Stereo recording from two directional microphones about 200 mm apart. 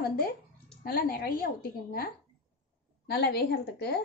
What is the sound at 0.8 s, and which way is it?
Speech, 45° left (ahead or behind).